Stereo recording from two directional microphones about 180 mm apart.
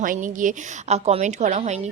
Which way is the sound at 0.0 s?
45° right (ahead or behind).